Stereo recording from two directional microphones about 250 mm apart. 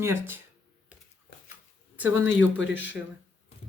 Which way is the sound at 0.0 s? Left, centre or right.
Centre.